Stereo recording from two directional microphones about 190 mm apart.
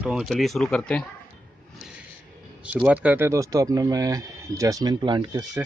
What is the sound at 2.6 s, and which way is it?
Speech, 5° right (ahead or behind).